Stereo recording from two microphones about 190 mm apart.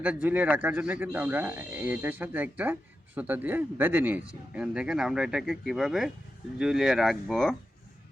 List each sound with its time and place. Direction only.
0.0 s speech: 5° right (ahead or behind)